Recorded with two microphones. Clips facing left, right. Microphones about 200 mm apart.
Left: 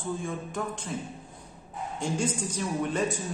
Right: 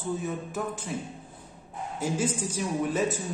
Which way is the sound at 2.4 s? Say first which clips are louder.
Right 1 dB; 5° right (ahead or behind).